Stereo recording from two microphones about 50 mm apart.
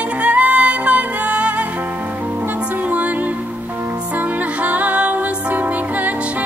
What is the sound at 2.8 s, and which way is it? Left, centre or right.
Music, right.